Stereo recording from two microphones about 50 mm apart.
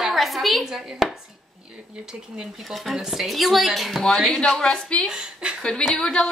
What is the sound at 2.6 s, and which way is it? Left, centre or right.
Speech, centre.